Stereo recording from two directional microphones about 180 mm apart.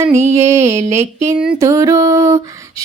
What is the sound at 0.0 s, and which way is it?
Music, 15° right (ahead or behind).